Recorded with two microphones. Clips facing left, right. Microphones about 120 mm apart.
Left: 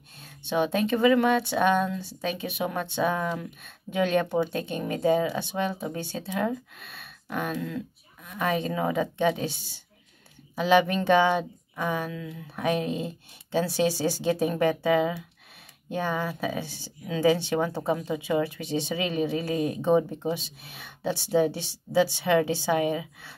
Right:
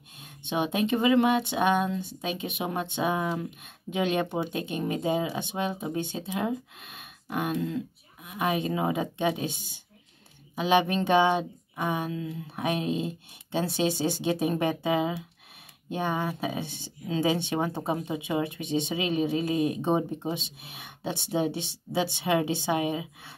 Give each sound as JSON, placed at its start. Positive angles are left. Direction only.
{"t": 0.2, "sound": "speech", "side_deg": -20}